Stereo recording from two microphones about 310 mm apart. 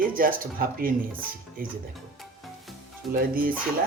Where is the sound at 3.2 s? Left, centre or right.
Right.